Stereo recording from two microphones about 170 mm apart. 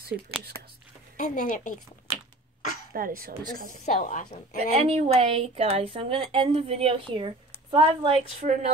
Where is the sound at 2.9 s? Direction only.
55° right (ahead or behind).